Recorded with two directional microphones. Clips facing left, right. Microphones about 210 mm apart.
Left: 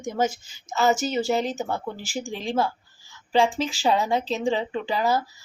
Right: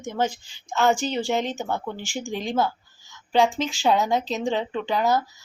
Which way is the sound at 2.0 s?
35° left (ahead or behind).